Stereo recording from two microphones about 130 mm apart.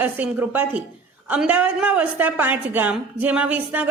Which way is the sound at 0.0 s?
10° right (ahead or behind).